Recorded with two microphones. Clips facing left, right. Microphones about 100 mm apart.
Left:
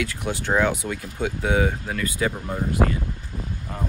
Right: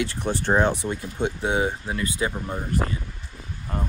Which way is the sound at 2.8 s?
45° left (ahead or behind).